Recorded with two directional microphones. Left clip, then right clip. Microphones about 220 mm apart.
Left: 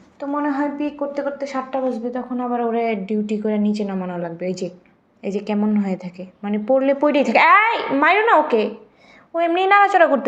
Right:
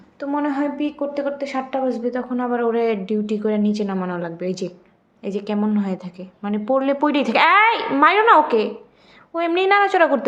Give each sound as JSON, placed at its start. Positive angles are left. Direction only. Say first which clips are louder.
{"t": 0.2, "sound": "a woman's voice", "louder": "even", "side_deg": -20}
{"t": 5.2, "sound": "a woman's voice", "louder": "left 1 dB", "side_deg": 0}